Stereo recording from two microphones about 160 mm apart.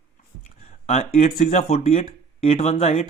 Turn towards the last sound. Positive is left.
turn(degrees=40)  # may be behind; listen again after turning